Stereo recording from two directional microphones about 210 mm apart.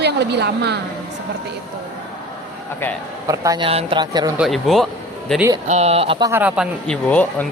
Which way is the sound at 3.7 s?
25° right (ahead or behind).